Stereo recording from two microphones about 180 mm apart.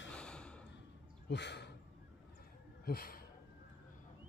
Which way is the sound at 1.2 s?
70° left (ahead or behind).